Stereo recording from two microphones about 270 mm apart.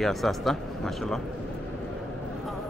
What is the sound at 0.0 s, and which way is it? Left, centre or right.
Speech, centre.